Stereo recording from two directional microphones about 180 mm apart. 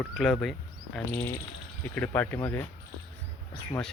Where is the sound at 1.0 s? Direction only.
10° left (ahead or behind).